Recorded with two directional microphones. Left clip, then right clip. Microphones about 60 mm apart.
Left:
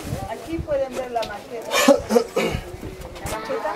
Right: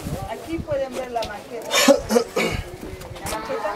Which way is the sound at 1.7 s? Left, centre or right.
Centre.